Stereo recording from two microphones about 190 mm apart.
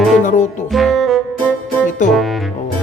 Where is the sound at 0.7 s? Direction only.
Centre (ahead or behind).